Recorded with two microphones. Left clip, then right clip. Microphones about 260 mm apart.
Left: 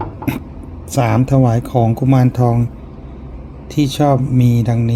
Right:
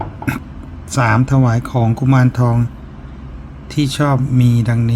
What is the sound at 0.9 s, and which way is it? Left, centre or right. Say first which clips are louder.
Speech: right 1 dB; centre.